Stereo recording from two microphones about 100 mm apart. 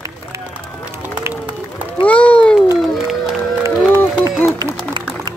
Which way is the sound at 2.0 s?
15° left (ahead or behind).